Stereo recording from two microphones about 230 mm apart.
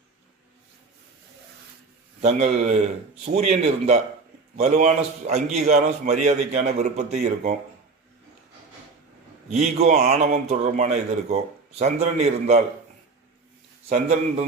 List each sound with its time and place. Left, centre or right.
2.2 s a man's voice: right
9.5 s a man's voice: right
13.9 s a man's voice: right